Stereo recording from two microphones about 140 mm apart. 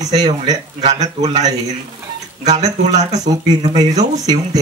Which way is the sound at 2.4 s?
55° right (ahead or behind).